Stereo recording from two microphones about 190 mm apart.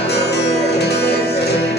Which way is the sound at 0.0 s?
60° left (ahead or behind).